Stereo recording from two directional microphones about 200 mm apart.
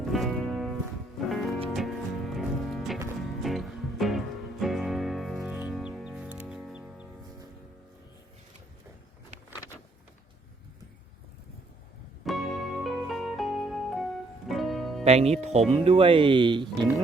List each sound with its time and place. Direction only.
0.0 s music: centre (ahead or behind)
12.2 s music: centre (ahead or behind)
15.0 s speech: 30° right (ahead or behind)